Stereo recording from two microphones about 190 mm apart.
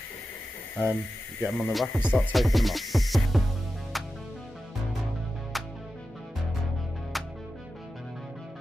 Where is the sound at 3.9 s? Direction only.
Centre (ahead or behind).